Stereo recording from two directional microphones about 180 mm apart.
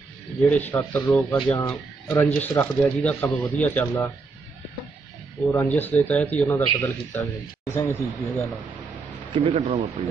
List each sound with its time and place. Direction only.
0.5 s speech: 10° left (ahead or behind)
5.5 s speech: 10° left (ahead or behind)
9.3 s speech: 30° right (ahead or behind)